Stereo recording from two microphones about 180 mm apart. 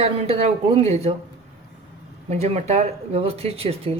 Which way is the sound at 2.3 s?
35° right (ahead or behind).